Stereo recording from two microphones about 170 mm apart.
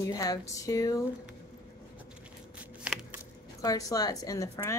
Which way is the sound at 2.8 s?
5° right (ahead or behind).